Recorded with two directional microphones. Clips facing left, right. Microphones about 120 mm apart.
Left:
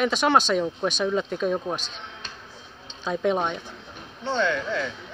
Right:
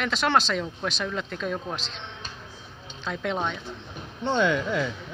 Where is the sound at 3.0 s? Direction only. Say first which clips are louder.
Left 5 dB; 15° left (ahead or behind).